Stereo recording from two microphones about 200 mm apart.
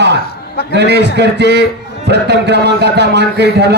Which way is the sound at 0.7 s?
55° right (ahead or behind).